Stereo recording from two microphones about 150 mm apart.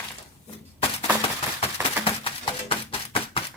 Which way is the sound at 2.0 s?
35° left (ahead or behind).